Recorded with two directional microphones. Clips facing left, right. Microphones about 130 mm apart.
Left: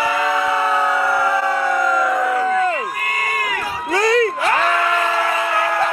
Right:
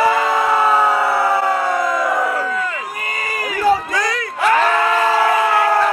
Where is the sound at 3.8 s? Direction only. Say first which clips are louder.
Left 6 dB; 30° left (ahead or behind).